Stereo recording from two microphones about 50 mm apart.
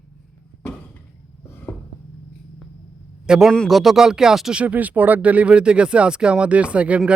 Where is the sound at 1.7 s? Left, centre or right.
Left.